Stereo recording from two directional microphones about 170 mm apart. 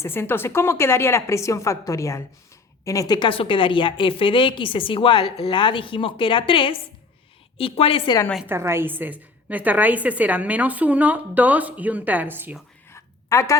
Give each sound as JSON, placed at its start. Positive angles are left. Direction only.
{"t": 0.0, "sound": "a woman's voice", "side_deg": 15}
{"t": 8.4, "sound": "a woman's voice", "side_deg": -15}
{"t": 12.9, "sound": "a sound", "side_deg": 15}